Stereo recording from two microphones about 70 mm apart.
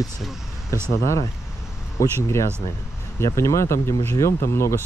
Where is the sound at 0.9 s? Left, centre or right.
Left.